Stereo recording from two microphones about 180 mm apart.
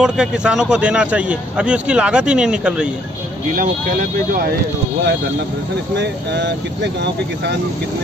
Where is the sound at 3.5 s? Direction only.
50° right (ahead or behind).